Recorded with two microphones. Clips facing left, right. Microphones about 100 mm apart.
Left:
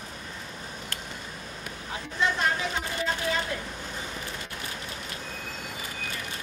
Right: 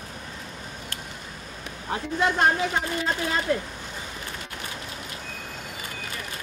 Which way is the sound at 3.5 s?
45° right (ahead or behind).